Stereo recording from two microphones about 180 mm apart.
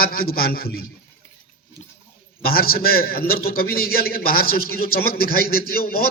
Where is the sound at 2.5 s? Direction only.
55° left (ahead or behind).